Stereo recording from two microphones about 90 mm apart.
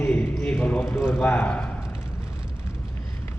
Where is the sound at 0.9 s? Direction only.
25° left (ahead or behind).